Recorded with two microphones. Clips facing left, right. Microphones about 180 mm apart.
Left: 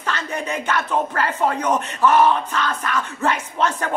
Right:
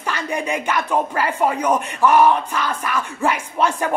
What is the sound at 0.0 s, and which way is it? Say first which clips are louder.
Speech: right 2 dB; 10° right (ahead or behind).